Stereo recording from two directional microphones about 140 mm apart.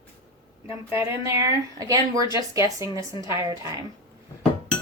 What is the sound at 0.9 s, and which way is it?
A woman's voice, 20° right (ahead or behind).